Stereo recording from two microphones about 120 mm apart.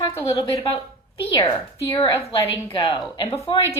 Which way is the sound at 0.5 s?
55° left (ahead or behind).